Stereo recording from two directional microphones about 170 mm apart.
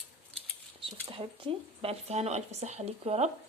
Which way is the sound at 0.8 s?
30° right (ahead or behind).